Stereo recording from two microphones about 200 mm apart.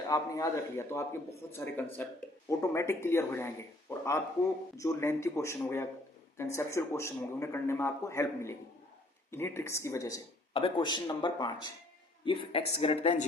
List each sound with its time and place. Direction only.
0.1 s speech: 15° left (ahead or behind)
10.5 s speech: 25° left (ahead or behind)